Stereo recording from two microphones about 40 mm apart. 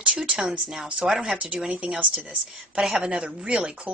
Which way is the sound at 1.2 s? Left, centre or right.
Right.